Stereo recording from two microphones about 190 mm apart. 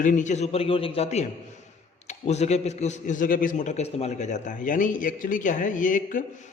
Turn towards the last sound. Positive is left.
turn(degrees=45)  # may be behind; listen again after turning